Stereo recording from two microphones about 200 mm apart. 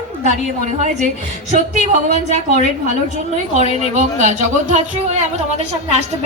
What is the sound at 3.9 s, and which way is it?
A woman's voice, 35° right (ahead or behind).